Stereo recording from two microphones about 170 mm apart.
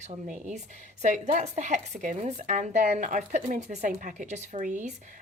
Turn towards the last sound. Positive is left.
turn(degrees=-50)  # may be behind; listen again after turning